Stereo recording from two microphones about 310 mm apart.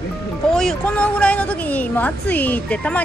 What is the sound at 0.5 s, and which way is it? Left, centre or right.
A woman's voice, centre.